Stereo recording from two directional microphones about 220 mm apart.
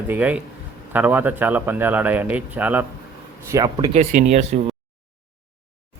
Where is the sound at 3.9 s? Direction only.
35° right (ahead or behind).